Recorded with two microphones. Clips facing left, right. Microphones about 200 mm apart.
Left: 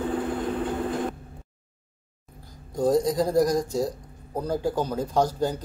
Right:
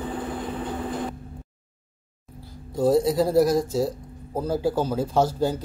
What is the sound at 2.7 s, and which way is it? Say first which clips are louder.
Speech: right 2 dB; 5° right (ahead or behind).